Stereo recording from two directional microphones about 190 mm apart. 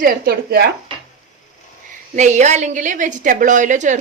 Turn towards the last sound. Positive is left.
turn(degrees=-40)  # may be behind; listen again after turning